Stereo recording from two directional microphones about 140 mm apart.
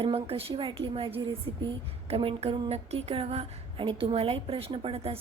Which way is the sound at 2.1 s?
40° right (ahead or behind).